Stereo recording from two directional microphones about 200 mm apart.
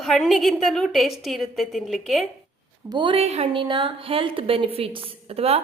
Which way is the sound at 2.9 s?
25° right (ahead or behind).